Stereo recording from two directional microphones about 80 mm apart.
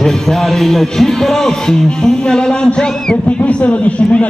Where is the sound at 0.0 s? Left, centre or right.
Centre.